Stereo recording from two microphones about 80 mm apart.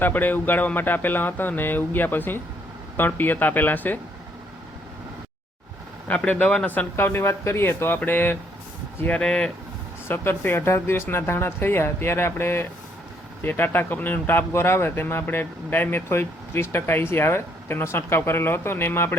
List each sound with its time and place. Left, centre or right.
0.0 s speech: left
6.1 s speech: centre
9.0 s speech: centre
10.1 s speech: left